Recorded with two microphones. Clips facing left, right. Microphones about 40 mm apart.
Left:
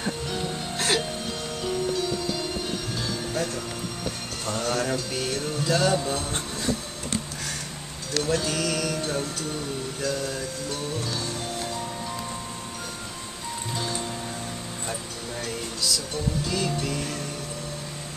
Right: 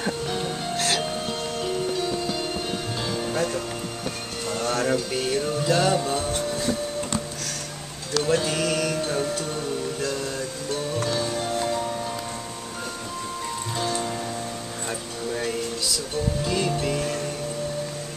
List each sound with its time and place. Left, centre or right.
0.0 s music: centre
0.7 s music: centre
1.6 s music: centre
4.5 s music: centre
8.2 s music: centre
14.9 s a sound: centre
16.4 s music: centre